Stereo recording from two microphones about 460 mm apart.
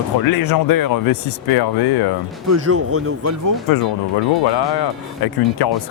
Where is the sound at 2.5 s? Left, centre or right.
Right.